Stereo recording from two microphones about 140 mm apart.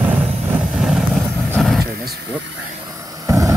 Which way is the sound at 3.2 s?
25° right (ahead or behind).